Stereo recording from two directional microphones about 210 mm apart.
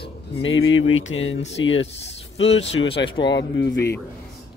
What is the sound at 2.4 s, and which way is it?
Speech, 30° left (ahead or behind).